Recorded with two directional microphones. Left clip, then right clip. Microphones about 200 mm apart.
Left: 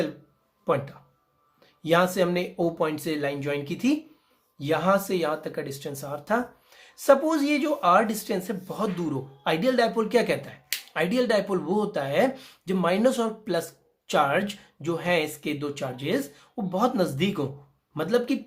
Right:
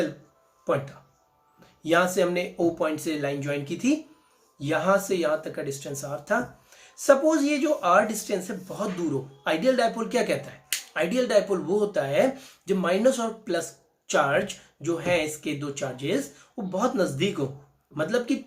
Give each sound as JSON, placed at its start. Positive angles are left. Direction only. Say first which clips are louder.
{"t": 1.8, "sound": "speech", "louder": "even", "side_deg": 50}